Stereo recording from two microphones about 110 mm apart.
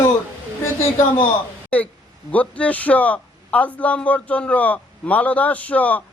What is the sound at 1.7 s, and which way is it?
A man's voice, 15° left (ahead or behind).